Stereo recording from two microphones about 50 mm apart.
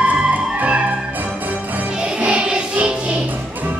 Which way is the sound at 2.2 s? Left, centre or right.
Right.